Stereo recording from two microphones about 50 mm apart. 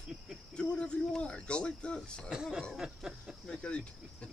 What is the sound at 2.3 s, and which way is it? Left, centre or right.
Speech, centre.